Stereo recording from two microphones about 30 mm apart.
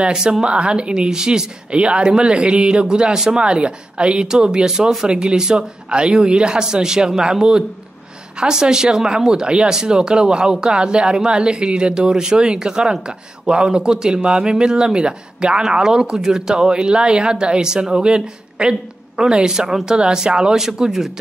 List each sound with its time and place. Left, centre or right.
0.1 s speech: right
1.7 s speech: right; by 16.6 s centre
16.6 s speech: right